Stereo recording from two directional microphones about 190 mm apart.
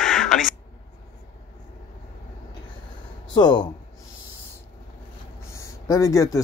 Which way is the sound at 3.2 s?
20° left (ahead or behind).